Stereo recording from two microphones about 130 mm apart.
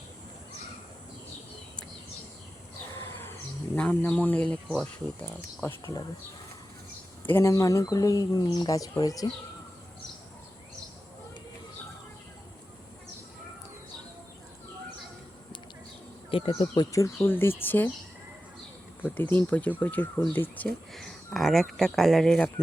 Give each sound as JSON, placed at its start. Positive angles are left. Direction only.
{"t": 2.9, "sound": "a sound", "side_deg": 15}
{"t": 3.8, "sound": "speech", "side_deg": 10}
{"t": 7.3, "sound": "speech", "side_deg": 20}
{"t": 16.3, "sound": "speech", "side_deg": 45}
{"t": 16.7, "sound": "speech", "side_deg": 30}
{"t": 19.1, "sound": "speech", "side_deg": 15}
{"t": 20.9, "sound": "speech", "side_deg": 0}